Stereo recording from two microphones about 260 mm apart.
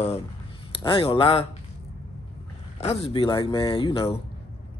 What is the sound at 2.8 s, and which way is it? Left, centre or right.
Speech, left.